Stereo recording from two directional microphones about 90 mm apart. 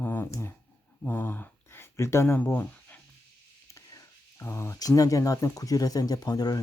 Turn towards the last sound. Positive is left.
turn(degrees=45)  # may be behind; listen again after turning